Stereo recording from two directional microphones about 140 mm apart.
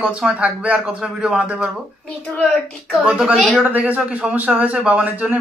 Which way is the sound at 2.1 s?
5° left (ahead or behind).